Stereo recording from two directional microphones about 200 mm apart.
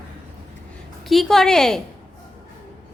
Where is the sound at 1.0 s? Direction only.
Centre (ahead or behind).